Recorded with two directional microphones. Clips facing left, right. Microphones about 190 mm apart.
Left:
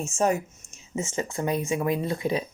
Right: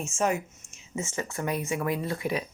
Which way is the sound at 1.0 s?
20° left (ahead or behind).